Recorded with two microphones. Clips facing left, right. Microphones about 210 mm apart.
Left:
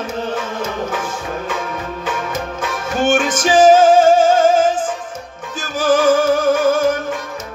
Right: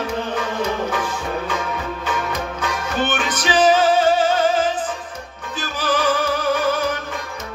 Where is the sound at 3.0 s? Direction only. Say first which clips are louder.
Left 8 dB; 50° left (ahead or behind).